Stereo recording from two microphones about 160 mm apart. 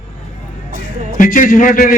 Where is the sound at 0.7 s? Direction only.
60° right (ahead or behind).